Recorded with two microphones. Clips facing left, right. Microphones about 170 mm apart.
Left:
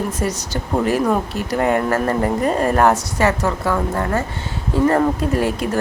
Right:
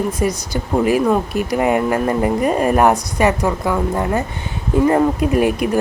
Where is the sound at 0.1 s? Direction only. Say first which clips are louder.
Right 3 dB; 10° right (ahead or behind).